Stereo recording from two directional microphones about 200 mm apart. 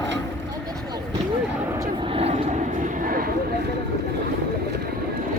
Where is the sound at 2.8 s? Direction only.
45° right (ahead or behind).